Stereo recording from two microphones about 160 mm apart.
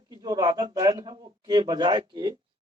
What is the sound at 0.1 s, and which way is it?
Speech, 25° right (ahead or behind).